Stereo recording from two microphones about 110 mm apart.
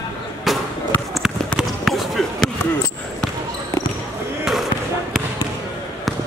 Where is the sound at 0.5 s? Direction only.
Centre (ahead or behind).